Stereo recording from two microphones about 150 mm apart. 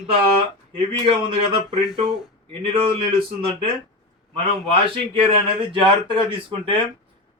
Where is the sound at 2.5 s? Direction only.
35° right (ahead or behind).